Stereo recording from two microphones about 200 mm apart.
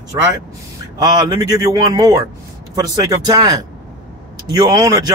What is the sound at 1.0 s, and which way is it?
Speech, 20° right (ahead or behind).